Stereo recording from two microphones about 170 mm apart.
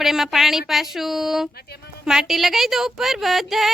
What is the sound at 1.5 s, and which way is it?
Speech, 70° left (ahead or behind).